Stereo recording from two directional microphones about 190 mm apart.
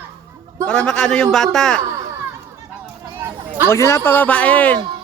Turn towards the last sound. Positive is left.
turn(degrees=5)  # may be behind; listen again after turning